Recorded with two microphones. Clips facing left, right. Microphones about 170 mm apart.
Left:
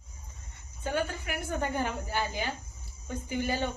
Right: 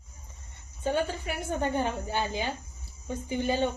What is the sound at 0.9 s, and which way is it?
A woman's voice, 25° right (ahead or behind).